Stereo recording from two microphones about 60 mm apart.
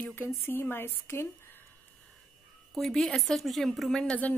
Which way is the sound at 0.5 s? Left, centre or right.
Left.